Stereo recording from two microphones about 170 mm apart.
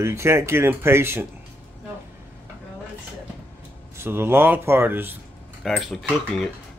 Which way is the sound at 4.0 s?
15° right (ahead or behind).